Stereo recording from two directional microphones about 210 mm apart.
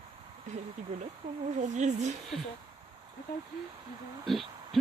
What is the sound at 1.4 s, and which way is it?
Speech, 35° right (ahead or behind).